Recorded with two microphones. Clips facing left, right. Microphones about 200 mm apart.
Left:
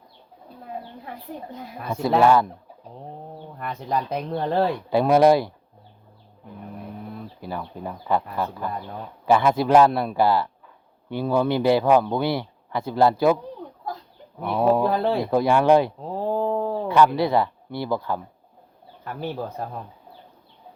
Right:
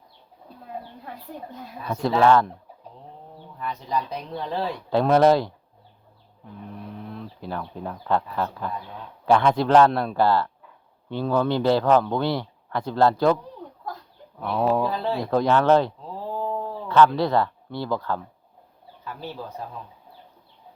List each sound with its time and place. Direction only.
1.9 s speech: 10° left (ahead or behind)
3.6 s speech: 55° left (ahead or behind)
4.9 s speech: 10° left (ahead or behind)
6.9 s speech: 5° left (ahead or behind)
14.8 s speech: 55° left (ahead or behind)
15.2 s speech: 10° left (ahead or behind)
16.0 s a sound: 55° left (ahead or behind)
16.9 s speech: 10° left (ahead or behind)
19.0 s speech: 55° left (ahead or behind)